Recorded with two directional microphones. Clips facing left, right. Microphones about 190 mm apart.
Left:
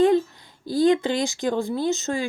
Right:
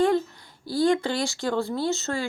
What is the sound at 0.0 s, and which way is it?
Speech, 20° left (ahead or behind).